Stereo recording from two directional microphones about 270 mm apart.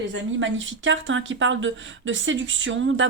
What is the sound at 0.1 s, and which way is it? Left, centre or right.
Speech, right.